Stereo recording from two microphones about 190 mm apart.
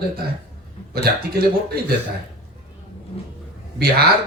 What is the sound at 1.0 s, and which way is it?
Speech, 55° right (ahead or behind).